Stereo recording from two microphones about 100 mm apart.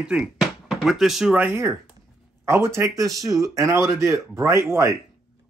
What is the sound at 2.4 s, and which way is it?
Speech, 25° right (ahead or behind).